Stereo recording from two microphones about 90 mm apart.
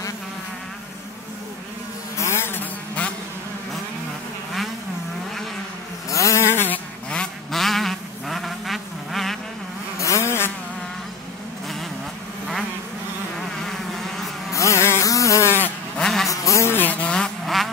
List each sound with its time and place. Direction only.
2.1 s insect: 30° left (ahead or behind)
6.0 s a sound: 35° left (ahead or behind)
7.1 s insect: 5° left (ahead or behind)
9.9 s vehicle: 35° left (ahead or behind)
13.7 s vehicle: 5° left (ahead or behind)
14.5 s a sound: 35° left (ahead or behind)
16.0 s vehicle: 5° left (ahead or behind)
16.3 s a sound: 35° left (ahead or behind)
16.7 s vehicle: 20° left (ahead or behind); by 17.6 s 5° left (ahead or behind)